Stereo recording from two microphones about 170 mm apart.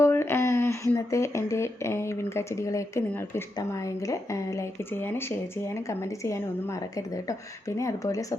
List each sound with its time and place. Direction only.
0.0 s speech: 15° left (ahead or behind)